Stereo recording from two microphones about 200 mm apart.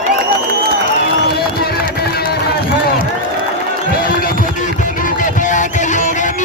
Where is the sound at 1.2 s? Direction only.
50° left (ahead or behind).